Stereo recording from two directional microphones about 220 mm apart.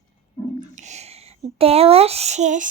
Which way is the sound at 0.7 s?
30° right (ahead or behind).